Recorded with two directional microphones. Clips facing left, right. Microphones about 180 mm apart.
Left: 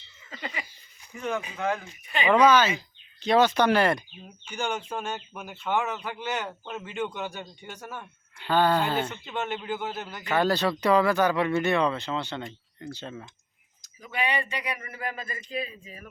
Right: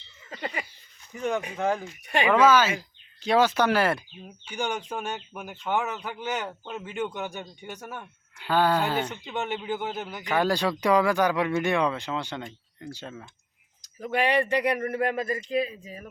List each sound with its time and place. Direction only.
0.3 s a sound: 40° right (ahead or behind)
1.0 s a sound: 10° left (ahead or behind)
1.5 s speech: 30° right (ahead or behind)
2.2 s speech: 5° right (ahead or behind)
6.4 s speech: centre (ahead or behind)
6.8 s speech: 10° right (ahead or behind)
14.0 s speech: 60° right (ahead or behind)
15.8 s speech: 35° right (ahead or behind)